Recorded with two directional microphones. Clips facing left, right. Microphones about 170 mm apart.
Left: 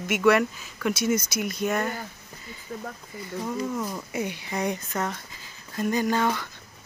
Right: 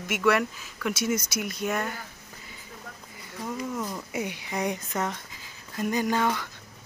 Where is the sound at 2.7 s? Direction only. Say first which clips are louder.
Left 12 dB; 50° left (ahead or behind).